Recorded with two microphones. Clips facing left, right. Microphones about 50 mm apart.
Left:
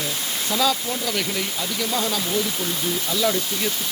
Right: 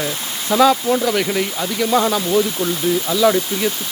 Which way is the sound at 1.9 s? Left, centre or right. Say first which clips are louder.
Right 10 dB; right.